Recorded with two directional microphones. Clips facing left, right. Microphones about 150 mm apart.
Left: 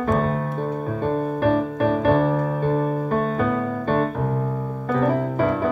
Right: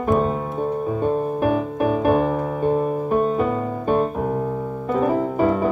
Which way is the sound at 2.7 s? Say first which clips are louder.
Right 3 dB; 15° right (ahead or behind).